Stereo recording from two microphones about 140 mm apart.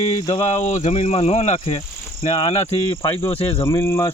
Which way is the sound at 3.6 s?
20° left (ahead or behind).